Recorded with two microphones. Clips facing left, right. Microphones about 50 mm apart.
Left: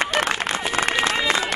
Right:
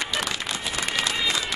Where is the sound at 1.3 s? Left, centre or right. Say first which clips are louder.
Left 5 dB; left.